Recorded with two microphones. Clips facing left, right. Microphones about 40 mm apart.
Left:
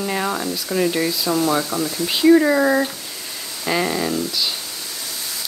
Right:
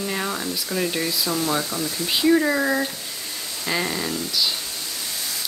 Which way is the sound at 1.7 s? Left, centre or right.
Left.